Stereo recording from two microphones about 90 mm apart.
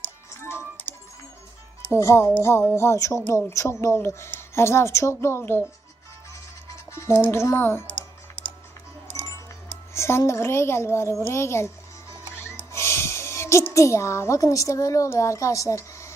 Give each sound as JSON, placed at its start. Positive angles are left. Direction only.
{"t": 1.9, "sound": "speech", "side_deg": 30}
{"t": 6.9, "sound": "a child's voice", "side_deg": 25}
{"t": 7.9, "sound": "typing", "side_deg": 70}
{"t": 9.9, "sound": "a child's voice", "side_deg": 30}
{"t": 12.4, "sound": "a sound", "side_deg": 30}
{"t": 15.1, "sound": "a woman's voice", "side_deg": 35}